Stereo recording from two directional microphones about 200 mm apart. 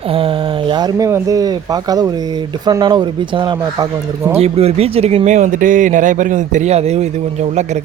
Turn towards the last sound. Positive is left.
turn(degrees=-35)  # may be behind; listen again after turning